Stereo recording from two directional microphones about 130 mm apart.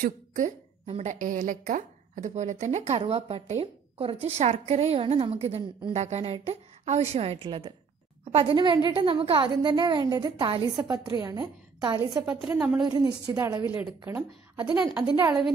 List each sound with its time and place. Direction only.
0.0 s a sound: 80° right
0.9 s a woman's voice: 80° right; by 12.0 s 35° right (ahead or behind)
12.3 s a woman's voice: 10° right (ahead or behind)
12.8 s a woman's voice: 30° right (ahead or behind)
15.0 s a woman's voice: 35° right (ahead or behind)